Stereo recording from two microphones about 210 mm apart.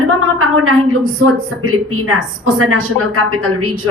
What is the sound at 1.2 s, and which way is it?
A woman's voice, 80° right.